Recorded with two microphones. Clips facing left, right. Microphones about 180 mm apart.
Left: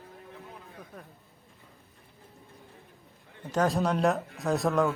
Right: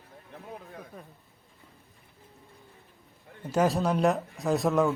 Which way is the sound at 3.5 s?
5° right (ahead or behind).